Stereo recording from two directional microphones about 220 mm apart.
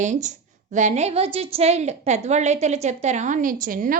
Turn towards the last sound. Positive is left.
turn(degrees=-40)  # may be behind; listen again after turning